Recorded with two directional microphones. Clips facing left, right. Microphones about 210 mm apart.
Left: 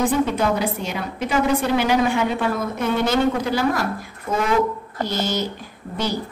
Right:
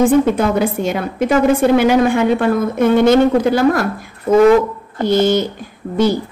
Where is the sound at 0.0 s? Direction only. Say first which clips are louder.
Right 7 dB; 50° right (ahead or behind).